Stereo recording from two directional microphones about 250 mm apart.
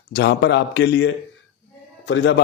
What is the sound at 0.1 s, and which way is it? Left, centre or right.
A man's voice, left.